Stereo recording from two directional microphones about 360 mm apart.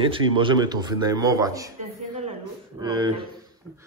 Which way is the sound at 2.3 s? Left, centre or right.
Centre.